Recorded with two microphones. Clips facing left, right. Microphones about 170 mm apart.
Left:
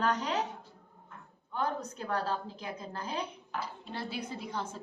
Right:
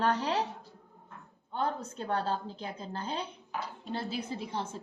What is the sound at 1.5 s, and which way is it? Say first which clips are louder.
A woman's voice: right 1 dB; 30° right (ahead or behind).